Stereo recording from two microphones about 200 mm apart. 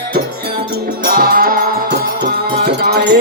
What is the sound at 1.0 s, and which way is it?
Music, 50° right (ahead or behind).